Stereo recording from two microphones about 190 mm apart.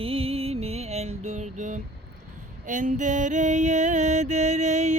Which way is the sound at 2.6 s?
40° right (ahead or behind).